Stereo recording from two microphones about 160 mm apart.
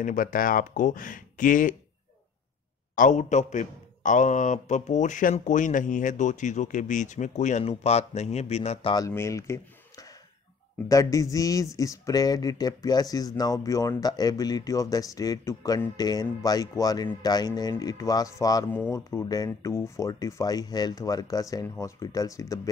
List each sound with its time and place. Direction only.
0.0 s speech: 60° left (ahead or behind)
3.0 s a man's voice: 50° left (ahead or behind)
8.9 s speech: 20° left (ahead or behind)